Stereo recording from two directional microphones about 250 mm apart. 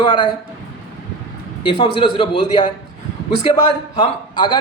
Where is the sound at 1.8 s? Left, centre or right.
Centre.